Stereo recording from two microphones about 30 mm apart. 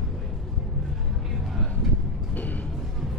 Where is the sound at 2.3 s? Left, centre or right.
Left.